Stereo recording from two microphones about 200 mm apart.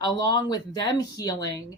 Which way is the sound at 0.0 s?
20° left (ahead or behind).